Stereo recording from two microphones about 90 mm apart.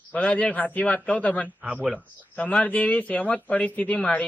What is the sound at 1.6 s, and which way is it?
Speech, 10° right (ahead or behind).